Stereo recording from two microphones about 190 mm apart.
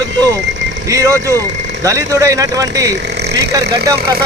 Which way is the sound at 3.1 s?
60° right (ahead or behind).